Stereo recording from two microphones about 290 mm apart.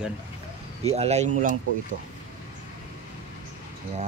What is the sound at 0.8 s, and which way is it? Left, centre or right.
Speech, right.